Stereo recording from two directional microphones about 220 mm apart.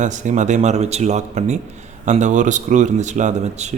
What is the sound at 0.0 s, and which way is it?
Speech, 35° right (ahead or behind).